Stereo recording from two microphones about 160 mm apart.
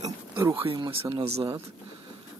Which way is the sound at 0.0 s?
20° right (ahead or behind).